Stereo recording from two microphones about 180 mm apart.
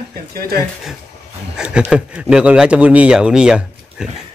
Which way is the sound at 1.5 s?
5° right (ahead or behind).